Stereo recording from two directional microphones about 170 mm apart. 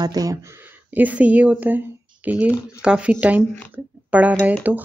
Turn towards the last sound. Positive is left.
turn(degrees=-10)  # may be behind; listen again after turning